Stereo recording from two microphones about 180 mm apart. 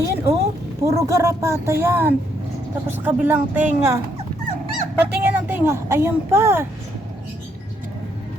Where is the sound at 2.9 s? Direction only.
10° right (ahead or behind).